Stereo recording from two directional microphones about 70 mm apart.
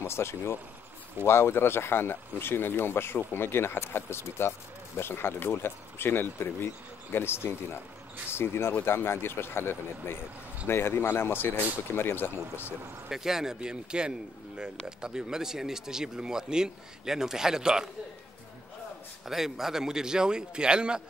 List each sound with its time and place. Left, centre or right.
0.0 s speech: left
13.1 s speech: centre
19.2 s speech: centre